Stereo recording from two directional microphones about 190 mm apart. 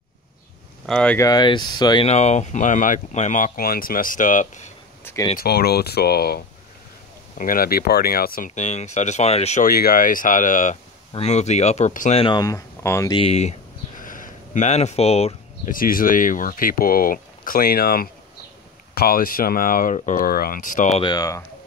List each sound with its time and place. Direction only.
0.8 s speech: 5° left (ahead or behind)
1.2 s speech: 20° left (ahead or behind)
2.0 s speech: 35° left (ahead or behind)
5.0 s speech: 20° left (ahead or behind)
5.4 s speech: 55° left (ahead or behind); by 9.7 s 35° left (ahead or behind)
9.7 s speech: 50° left (ahead or behind)
12.2 s speech: 25° left (ahead or behind)
13.1 s a sound: 30° left (ahead or behind)
15.7 s speech: 50° left (ahead or behind)
21.0 s speech: 20° left (ahead or behind)